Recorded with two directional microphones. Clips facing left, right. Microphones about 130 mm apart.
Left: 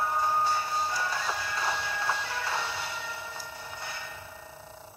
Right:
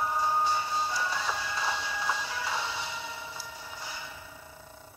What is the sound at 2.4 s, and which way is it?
Music, 15° right (ahead or behind).